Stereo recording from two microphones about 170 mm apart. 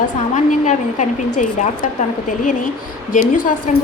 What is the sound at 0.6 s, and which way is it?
A woman's voice, 45° left (ahead or behind).